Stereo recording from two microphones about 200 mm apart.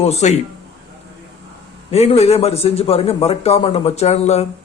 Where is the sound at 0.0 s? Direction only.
35° left (ahead or behind).